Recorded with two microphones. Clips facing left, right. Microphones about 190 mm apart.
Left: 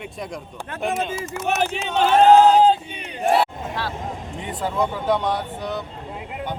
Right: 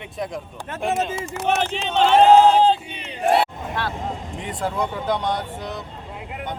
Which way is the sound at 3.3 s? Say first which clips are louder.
Even; 60° right (ahead or behind).